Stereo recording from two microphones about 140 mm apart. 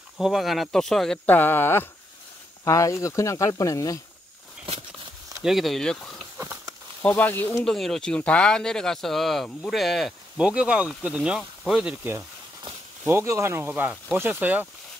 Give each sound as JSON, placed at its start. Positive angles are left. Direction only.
{"t": 0.2, "sound": "speech", "side_deg": 0}
{"t": 5.4, "sound": "speech", "side_deg": 0}
{"t": 6.3, "sound": "a sound", "side_deg": -15}
{"t": 7.0, "sound": "speech", "side_deg": 10}
{"t": 7.6, "sound": "speech", "side_deg": 5}